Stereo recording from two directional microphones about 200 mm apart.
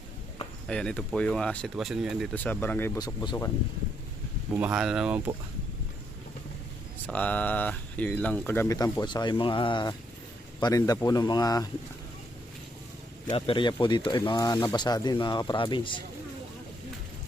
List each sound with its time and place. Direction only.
0.7 s speech: 5° left (ahead or behind)
4.5 s speech: 5° right (ahead or behind)
7.1 s speech: 5° left (ahead or behind)
13.2 s speech: 25° left (ahead or behind)